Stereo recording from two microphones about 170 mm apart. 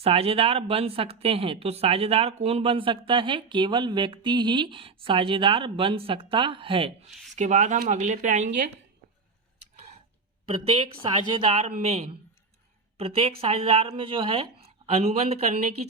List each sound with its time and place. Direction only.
0.0 s a woman's voice: 35° right (ahead or behind)
7.3 s speech: 45° right (ahead or behind)
10.4 s a woman's voice: 35° right (ahead or behind)